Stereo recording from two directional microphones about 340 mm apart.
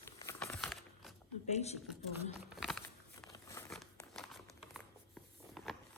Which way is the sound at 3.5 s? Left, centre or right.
Centre.